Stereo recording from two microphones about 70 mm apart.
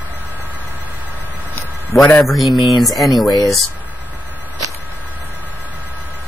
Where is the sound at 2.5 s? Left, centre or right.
Left.